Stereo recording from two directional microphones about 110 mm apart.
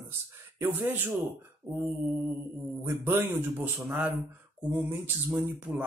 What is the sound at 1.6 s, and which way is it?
Speech, 15° right (ahead or behind).